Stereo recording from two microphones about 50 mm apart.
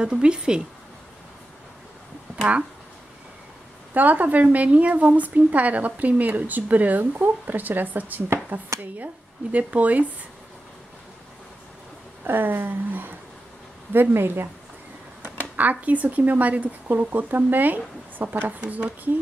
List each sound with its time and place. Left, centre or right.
0.0 s speech: centre
3.9 s a woman's voice: right
12.3 s a woman's voice: right
15.5 s a woman's voice: right
18.6 s speech: right